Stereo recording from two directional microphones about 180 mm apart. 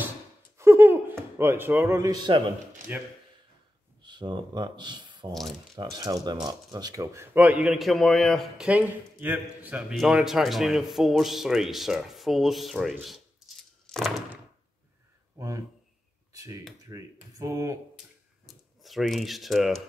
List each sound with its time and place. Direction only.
0.6 s a sound: 15° right (ahead or behind)
2.9 s speech: 10° right (ahead or behind)
4.0 s speech: 25° right (ahead or behind); by 14.4 s centre (ahead or behind)
15.3 s a sound: 20° right (ahead or behind)
16.3 s speech: 20° right (ahead or behind)
18.5 s speech: centre (ahead or behind)